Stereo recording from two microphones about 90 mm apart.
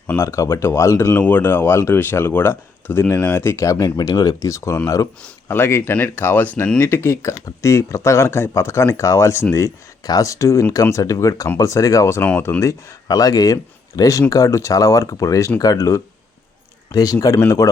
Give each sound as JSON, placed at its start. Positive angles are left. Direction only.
{"t": 0.2, "sound": "speech", "side_deg": 30}
{"t": 1.2, "sound": "speech", "side_deg": 20}
{"t": 3.8, "sound": "speech", "side_deg": 50}
{"t": 10.0, "sound": "speech", "side_deg": 45}